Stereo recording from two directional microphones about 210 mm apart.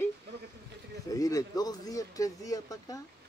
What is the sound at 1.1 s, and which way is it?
Speech, 15° left (ahead or behind).